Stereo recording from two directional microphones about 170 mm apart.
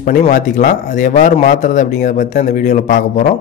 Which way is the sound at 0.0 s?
50° left (ahead or behind).